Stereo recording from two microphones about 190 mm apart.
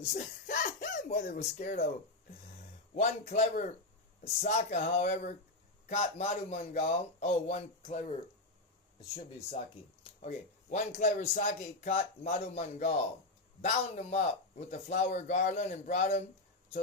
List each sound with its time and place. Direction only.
0.0 s speech: 40° left (ahead or behind)
2.9 s speech: 35° left (ahead or behind)